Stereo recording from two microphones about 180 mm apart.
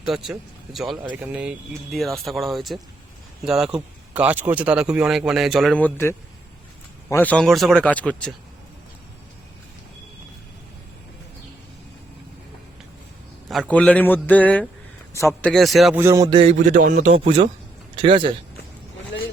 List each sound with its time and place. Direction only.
0.0 s a man's voice: centre (ahead or behind)
13.5 s a man's voice: 5° left (ahead or behind)
16.0 s a sound: 15° right (ahead or behind)
16.5 s a man's voice: 45° right (ahead or behind); by 18.3 s 30° right (ahead or behind)